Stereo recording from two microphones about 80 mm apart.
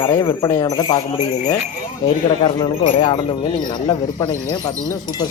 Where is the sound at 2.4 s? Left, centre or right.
Left.